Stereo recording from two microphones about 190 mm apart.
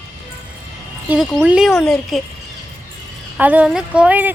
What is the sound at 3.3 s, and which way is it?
Speech, 10° right (ahead or behind).